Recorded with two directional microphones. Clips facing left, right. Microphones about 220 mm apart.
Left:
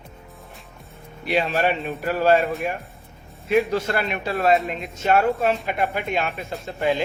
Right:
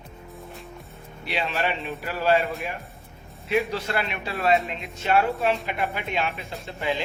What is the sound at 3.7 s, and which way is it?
A man's voice, 45° left (ahead or behind).